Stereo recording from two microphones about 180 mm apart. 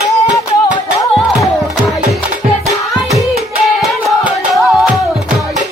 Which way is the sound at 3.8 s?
Centre (ahead or behind).